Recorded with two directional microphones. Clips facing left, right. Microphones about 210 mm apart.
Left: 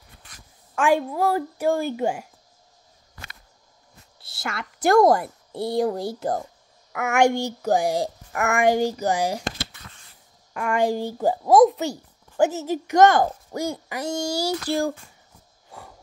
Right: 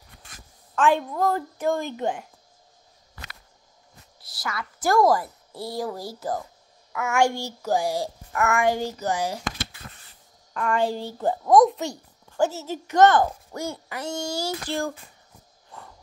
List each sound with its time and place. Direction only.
0.7 s speech: 10° left (ahead or behind)
4.2 s a woman's voice: 25° left (ahead or behind)
6.9 s a child's voice: 65° left (ahead or behind)
7.2 s speech: 15° left (ahead or behind)
10.5 s speech: 10° left (ahead or behind)
12.4 s speech: 15° left (ahead or behind)